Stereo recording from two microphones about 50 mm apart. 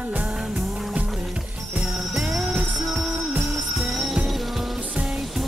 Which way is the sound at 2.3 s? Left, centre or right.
Centre.